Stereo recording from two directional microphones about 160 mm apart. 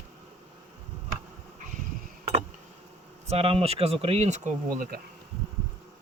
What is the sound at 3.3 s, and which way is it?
Speech, 40° right (ahead or behind).